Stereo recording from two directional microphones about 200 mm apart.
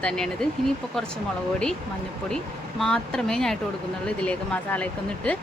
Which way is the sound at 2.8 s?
5° left (ahead or behind).